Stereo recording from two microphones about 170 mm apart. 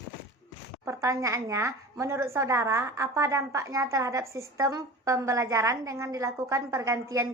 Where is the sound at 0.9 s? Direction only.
20° right (ahead or behind).